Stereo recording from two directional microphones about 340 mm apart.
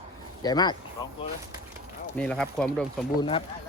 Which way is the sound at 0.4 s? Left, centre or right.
Centre.